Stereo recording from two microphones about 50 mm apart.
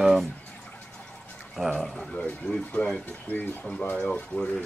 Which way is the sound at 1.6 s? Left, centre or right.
Centre.